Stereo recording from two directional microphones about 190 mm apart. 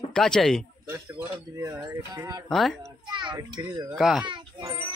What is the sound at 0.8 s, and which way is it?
Speech, 15° right (ahead or behind).